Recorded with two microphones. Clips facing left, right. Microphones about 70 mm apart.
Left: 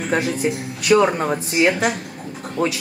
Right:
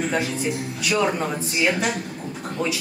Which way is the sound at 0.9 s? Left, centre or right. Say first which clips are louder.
Left 8 dB; left.